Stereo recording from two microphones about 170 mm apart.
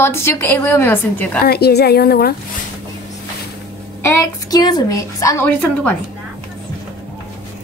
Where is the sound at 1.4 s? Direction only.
65° left (ahead or behind).